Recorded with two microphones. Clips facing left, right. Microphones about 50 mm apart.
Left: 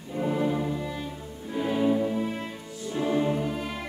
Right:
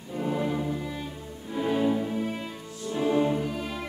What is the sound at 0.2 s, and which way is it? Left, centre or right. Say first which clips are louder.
Music: left 2 dB; centre.